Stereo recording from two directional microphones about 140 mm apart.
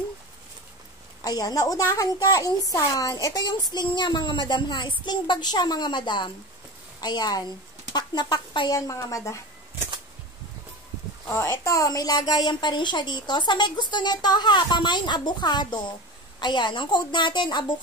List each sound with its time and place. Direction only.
1.2 s a woman's voice: 30° left (ahead or behind)
11.2 s a woman's voice: 20° left (ahead or behind)